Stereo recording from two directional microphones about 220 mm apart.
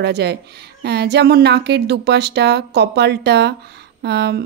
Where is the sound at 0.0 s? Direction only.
50° right (ahead or behind).